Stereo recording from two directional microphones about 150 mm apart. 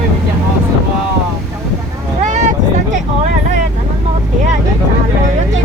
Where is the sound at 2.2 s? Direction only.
50° right (ahead or behind).